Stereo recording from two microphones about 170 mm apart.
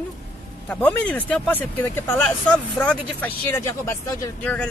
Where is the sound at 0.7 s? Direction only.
10° left (ahead or behind).